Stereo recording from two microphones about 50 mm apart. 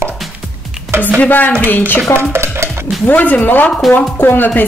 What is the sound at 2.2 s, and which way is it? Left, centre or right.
Stir, right.